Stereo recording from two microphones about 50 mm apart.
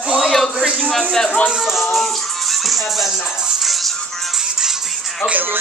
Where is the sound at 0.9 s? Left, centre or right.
Centre.